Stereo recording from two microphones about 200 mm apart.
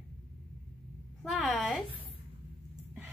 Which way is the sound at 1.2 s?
Centre (ahead or behind).